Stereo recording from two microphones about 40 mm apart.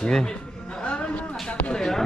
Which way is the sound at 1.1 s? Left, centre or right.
Left.